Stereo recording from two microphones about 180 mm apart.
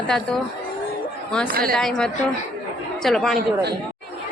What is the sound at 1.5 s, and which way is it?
Speech, 55° right (ahead or behind).